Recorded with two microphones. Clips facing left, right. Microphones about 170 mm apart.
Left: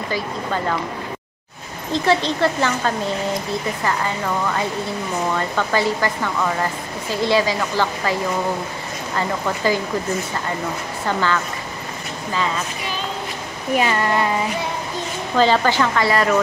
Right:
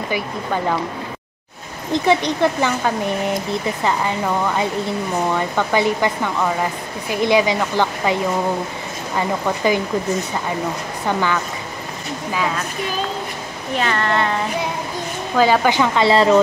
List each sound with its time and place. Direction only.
1.9 s speech: 15° right (ahead or behind)
11.1 s speech: 15° right (ahead or behind)
13.7 s speech: 10° left (ahead or behind)
15.3 s speech: 10° right (ahead or behind)